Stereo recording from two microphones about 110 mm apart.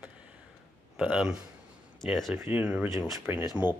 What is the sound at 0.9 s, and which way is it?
Speech, 5° right (ahead or behind).